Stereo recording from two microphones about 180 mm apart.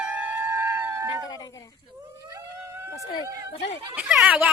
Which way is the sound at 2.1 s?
20° right (ahead or behind).